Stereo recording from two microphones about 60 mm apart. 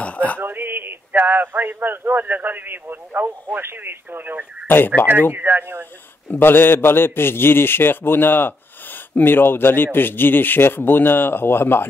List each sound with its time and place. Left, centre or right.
0.0 s a sound: left
0.4 s speech: right
4.6 s a man's voice: left
5.3 s speech: right
6.2 s a man's voice: left